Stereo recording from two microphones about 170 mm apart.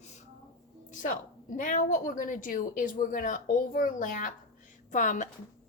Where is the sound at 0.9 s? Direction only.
50° left (ahead or behind).